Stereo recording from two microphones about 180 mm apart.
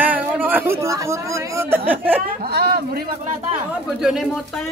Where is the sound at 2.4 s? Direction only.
65° right (ahead or behind).